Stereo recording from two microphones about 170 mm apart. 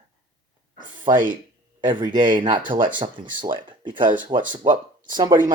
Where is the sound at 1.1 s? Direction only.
20° right (ahead or behind).